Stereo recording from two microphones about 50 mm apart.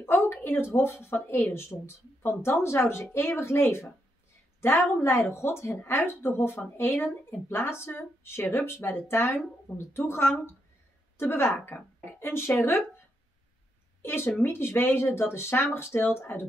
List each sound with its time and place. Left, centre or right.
0.0 s a sound: left
1.0 s speech: left
4.9 s speech: left
5.3 s speech: left
14.0 s speech: left